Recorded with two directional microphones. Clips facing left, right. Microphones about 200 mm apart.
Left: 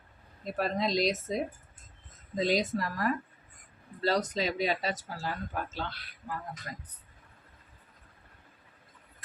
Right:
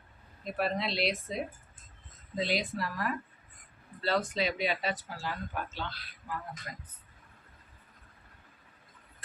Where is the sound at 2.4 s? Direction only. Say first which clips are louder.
Left 4 dB; 40° left (ahead or behind).